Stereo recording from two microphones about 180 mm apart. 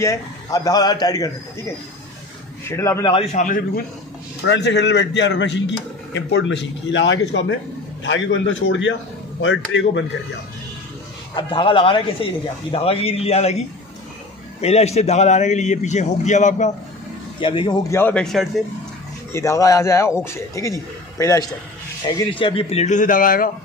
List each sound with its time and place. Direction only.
0.0 s speech: 20° left (ahead or behind)
2.7 s a man's voice: 15° left (ahead or behind)
3.1 s a man's voice: 35° left (ahead or behind)
3.4 s a man's voice: 50° left (ahead or behind)
4.5 s a man's voice: 70° left (ahead or behind); by 10.0 s 90° left
11.3 s a man's voice: 30° left (ahead or behind)
14.6 s a man's voice: 35° left (ahead or behind)
17.4 s a man's voice: 30° left (ahead or behind); by 18.5 s centre (ahead or behind)
19.3 s a man's voice: 15° left (ahead or behind)
22.0 s a man's voice: 30° left (ahead or behind); by 23.5 s 50° left (ahead or behind)